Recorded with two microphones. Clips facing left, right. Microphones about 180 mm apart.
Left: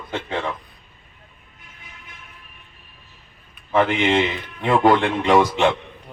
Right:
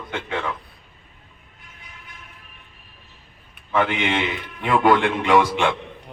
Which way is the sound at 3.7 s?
30° left (ahead or behind).